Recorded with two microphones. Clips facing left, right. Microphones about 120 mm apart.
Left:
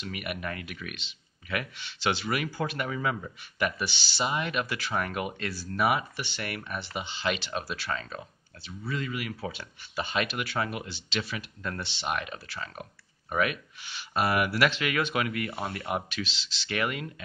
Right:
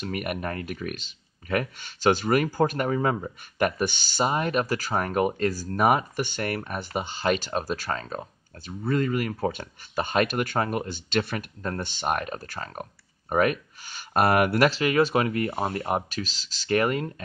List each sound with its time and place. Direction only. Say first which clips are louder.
0.0 s speech: right 5 dB; 45° right (ahead or behind)